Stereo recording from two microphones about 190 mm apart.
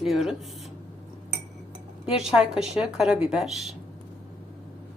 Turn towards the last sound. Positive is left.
turn(degrees=0)  # may be behind; listen again after turning